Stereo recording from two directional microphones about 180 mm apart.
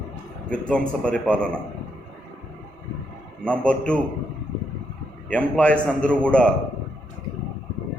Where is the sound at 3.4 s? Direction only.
5° left (ahead or behind).